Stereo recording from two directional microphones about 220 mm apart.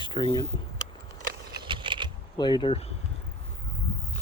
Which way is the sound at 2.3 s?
20° left (ahead or behind).